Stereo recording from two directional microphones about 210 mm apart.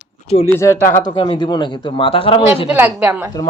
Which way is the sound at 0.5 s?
10° left (ahead or behind).